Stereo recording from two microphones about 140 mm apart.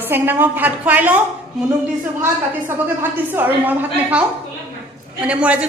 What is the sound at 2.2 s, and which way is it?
A woman's voice, 15° right (ahead or behind).